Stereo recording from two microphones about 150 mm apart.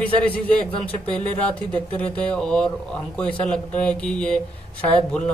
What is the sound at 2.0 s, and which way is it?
A man's voice, 10° left (ahead or behind).